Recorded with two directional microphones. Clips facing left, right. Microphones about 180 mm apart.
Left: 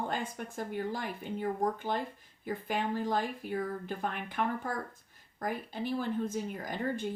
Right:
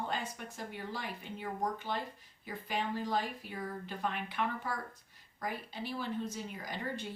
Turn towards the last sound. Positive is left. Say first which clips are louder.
# left 6 dB
turn(degrees=50)  # may be behind; listen again after turning